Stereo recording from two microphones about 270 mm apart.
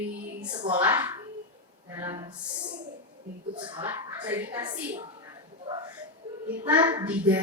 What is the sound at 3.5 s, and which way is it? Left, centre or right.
Speech, centre.